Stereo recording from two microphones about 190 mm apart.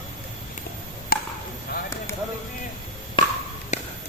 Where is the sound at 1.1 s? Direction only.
55° left (ahead or behind).